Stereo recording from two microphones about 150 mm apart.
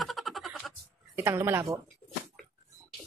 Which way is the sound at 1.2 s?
15° right (ahead or behind).